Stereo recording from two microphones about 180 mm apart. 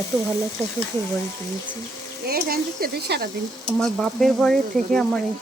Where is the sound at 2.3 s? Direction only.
55° right (ahead or behind).